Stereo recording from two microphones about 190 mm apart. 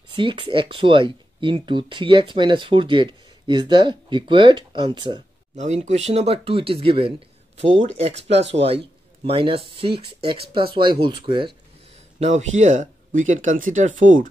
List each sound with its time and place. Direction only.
0.1 s speech: 25° right (ahead or behind)
5.6 s speech: 35° right (ahead or behind)
12.2 s speech: 40° right (ahead or behind)